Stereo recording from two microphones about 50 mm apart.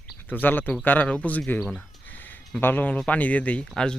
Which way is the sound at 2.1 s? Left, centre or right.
Left.